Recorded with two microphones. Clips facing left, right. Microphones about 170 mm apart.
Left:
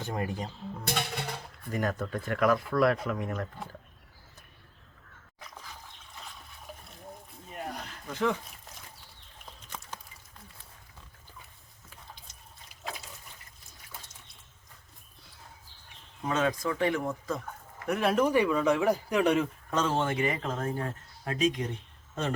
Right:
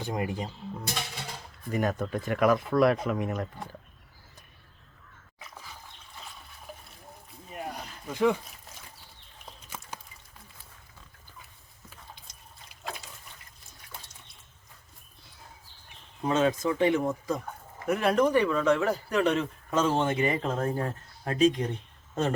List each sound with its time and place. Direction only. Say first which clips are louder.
0.0 s speech: right 2 dB; 10° right (ahead or behind)
0.9 s music: left 4 dB; 60° left (ahead or behind)
1.7 s speech: right 3 dB; 20° right (ahead or behind)
6.1 s water: even; centre (ahead or behind)
7.5 s a sound: right 1 dB; 5° right (ahead or behind)
9.5 s a sound: right 1 dB; 5° right (ahead or behind)
16.2 s speech: right 4 dB; 30° right (ahead or behind)
17.8 s speech: right 2 dB; centre (ahead or behind)
19.7 s speech: right 3 dB; 10° right (ahead or behind)
20.0 s speech: right 3 dB; 25° right (ahead or behind)